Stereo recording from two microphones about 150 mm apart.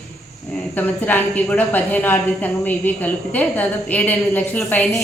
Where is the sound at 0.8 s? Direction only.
10° left (ahead or behind).